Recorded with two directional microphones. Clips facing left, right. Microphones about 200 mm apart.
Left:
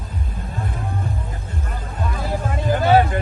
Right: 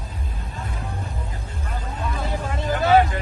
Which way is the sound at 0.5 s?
55° left (ahead or behind).